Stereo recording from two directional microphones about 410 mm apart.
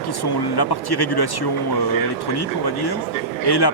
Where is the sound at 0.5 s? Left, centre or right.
Left.